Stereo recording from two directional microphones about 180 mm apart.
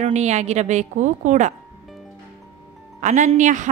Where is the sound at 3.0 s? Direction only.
40° right (ahead or behind).